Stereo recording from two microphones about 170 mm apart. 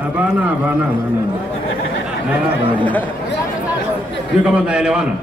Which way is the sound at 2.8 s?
10° left (ahead or behind).